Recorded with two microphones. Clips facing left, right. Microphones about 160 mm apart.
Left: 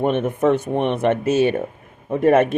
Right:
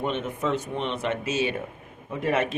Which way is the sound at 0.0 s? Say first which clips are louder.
Left 9 dB; 55° left (ahead or behind).